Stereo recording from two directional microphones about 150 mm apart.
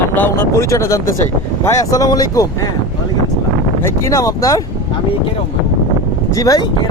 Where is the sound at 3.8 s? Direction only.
20° left (ahead or behind).